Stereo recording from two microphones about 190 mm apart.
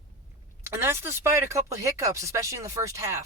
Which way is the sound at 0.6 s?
15° right (ahead or behind).